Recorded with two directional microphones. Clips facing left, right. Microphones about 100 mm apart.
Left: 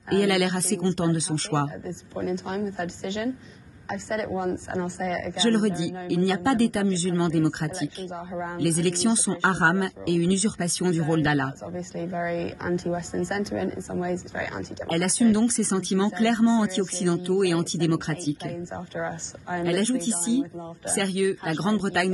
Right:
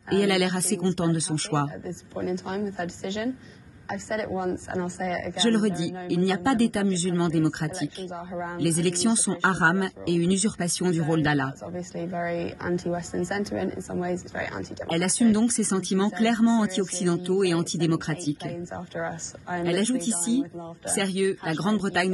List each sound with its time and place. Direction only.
0.1 s speech: 5° right (ahead or behind)
4.3 s a woman's voice: 30° left (ahead or behind)
5.0 s speech: 5° right (ahead or behind)
8.1 s a woman's voice: 25° left (ahead or behind)
8.5 s a woman's voice: 5° right (ahead or behind)
12.8 s a woman's voice: 25° left (ahead or behind)
13.3 s a woman's voice: 5° right (ahead or behind)
18.7 s a woman's voice: 25° left (ahead or behind)
19.5 s speech: 5° right (ahead or behind)